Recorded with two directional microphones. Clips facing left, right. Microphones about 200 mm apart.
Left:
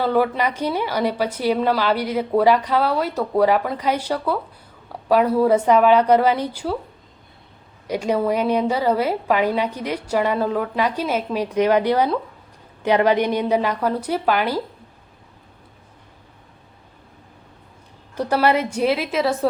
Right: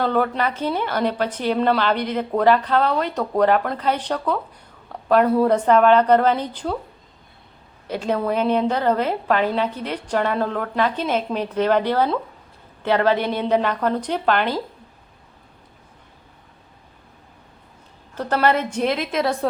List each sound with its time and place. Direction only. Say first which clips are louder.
0.0 s a woman's voice: left 1 dB; 10° left (ahead or behind)
7.9 s a woman's voice: left 2 dB; 10° left (ahead or behind)
18.1 s a woman's voice: left 1 dB; 10° left (ahead or behind)